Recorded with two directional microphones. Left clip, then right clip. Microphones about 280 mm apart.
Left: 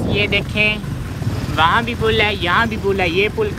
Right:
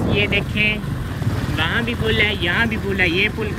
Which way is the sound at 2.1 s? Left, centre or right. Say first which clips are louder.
Left 1 dB; left.